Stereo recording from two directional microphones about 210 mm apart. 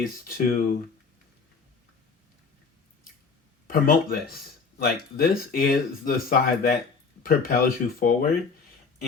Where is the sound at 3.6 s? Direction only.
45° left (ahead or behind).